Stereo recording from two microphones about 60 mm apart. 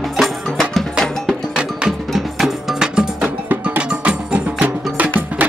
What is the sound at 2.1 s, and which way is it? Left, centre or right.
Music, centre.